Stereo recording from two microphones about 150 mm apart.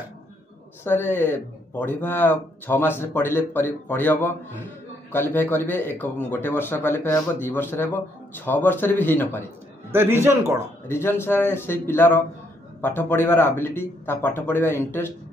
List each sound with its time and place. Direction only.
0.8 s speech: 15° left (ahead or behind)
9.8 s a man's voice: 15° right (ahead or behind)
10.9 s speech: 15° left (ahead or behind)